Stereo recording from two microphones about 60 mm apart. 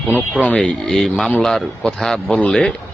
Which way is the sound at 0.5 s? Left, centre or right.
Centre.